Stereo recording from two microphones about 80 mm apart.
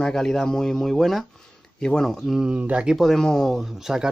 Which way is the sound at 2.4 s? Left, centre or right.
Centre.